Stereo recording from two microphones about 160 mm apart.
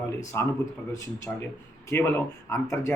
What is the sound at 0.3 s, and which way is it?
Speech, 20° left (ahead or behind).